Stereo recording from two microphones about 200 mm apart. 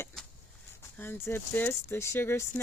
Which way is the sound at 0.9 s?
10° left (ahead or behind).